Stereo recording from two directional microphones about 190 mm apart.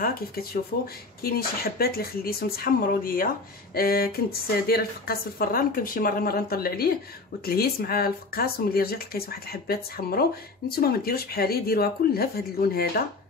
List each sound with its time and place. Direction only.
0.0 s speech: 50° left (ahead or behind)